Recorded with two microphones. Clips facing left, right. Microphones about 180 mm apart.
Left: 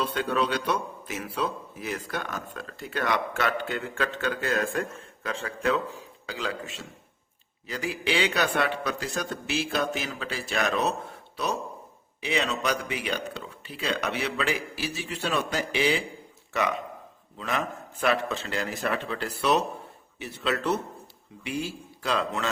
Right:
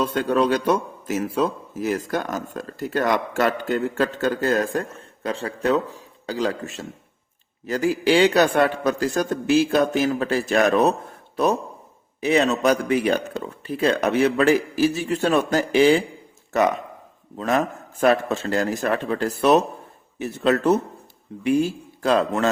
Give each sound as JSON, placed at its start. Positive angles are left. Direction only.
{"t": 0.0, "sound": "a man's voice", "side_deg": -45}
{"t": 12.2, "sound": "a man's voice", "side_deg": -45}